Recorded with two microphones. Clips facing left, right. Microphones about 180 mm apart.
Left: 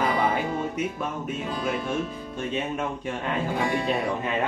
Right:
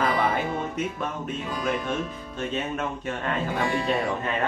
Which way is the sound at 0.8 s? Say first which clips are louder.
Even; 10° left (ahead or behind).